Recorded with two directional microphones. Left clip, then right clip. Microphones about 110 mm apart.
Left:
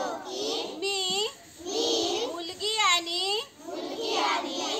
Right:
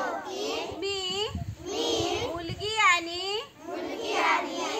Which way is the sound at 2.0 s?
20° left (ahead or behind).